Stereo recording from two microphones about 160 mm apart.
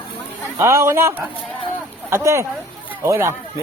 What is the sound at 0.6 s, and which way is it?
Speech, 15° right (ahead or behind).